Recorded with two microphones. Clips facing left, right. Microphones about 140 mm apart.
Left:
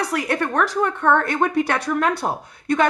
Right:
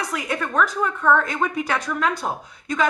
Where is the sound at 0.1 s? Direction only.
65° left (ahead or behind).